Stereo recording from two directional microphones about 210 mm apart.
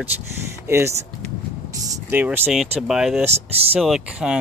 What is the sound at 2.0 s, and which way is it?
Speech, 10° right (ahead or behind).